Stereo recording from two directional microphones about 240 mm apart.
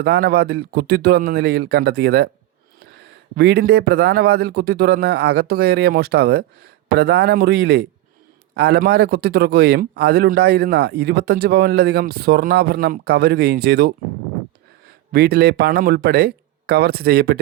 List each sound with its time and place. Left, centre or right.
0.0 s a man's voice: right
3.3 s a man's voice: right
15.1 s a man's voice: right